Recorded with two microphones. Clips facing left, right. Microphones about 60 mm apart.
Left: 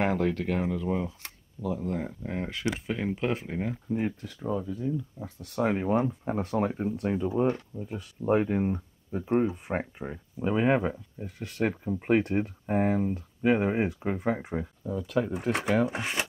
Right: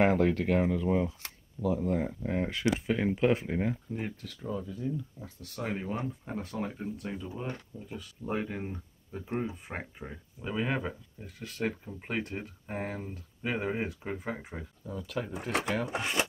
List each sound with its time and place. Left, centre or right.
0.0 s speech: centre
3.9 s speech: centre
5.2 s speech: left
7.9 s speech: left
14.2 s speech: left
15.0 s speech: centre